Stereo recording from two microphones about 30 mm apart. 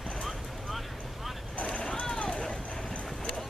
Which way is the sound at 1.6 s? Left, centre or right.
Left.